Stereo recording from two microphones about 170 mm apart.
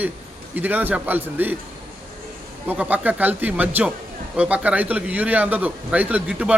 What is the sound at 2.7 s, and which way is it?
A man's voice, 10° right (ahead or behind).